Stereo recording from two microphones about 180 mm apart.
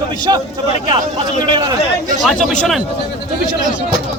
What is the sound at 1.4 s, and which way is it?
Speech, 25° right (ahead or behind).